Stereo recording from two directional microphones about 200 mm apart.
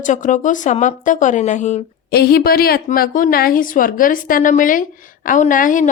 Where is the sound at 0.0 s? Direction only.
40° left (ahead or behind).